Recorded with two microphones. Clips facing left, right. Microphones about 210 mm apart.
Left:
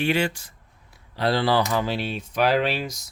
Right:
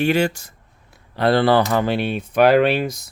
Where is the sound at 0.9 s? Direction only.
55° right (ahead or behind).